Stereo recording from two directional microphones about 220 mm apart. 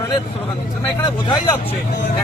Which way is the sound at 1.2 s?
25° left (ahead or behind).